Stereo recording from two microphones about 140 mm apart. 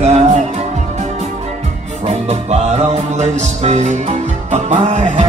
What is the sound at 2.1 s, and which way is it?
Music, 50° right (ahead or behind).